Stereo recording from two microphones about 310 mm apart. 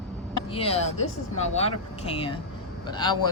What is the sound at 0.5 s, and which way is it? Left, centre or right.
Speech, centre.